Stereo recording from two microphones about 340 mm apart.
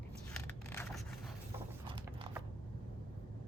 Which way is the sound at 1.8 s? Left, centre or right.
Centre.